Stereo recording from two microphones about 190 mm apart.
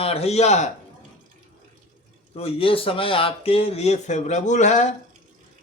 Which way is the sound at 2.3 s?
30° left (ahead or behind).